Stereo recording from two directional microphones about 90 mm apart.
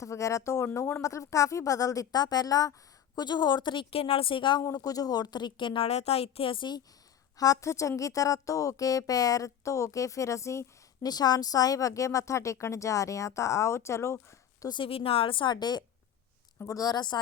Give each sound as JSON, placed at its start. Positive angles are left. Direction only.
{"t": 0.0, "sound": "speech", "side_deg": 35}
{"t": 1.0, "sound": "a woman's voice", "side_deg": 40}
{"t": 4.6, "sound": "a woman's voice", "side_deg": 40}
{"t": 7.3, "sound": "speech", "side_deg": 40}
{"t": 11.0, "sound": "speech", "side_deg": 45}
{"t": 14.7, "sound": "a woman's voice", "side_deg": 80}
{"t": 16.6, "sound": "a woman's voice", "side_deg": 45}